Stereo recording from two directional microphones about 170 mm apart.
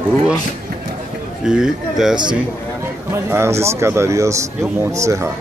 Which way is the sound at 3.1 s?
15° right (ahead or behind).